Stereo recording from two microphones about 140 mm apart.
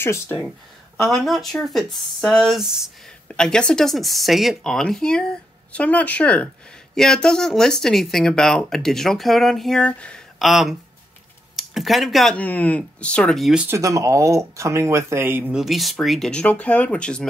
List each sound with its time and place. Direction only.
0.0 s speech: 15° left (ahead or behind)
1.0 s speech: centre (ahead or behind)
12.4 s speech: 10° left (ahead or behind)
13.7 s speech: 20° right (ahead or behind)
15.5 s speech: centre (ahead or behind)